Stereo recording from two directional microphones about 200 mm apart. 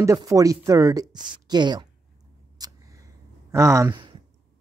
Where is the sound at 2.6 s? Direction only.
20° right (ahead or behind).